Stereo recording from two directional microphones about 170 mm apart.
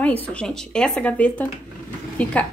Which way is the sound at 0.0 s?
10° left (ahead or behind).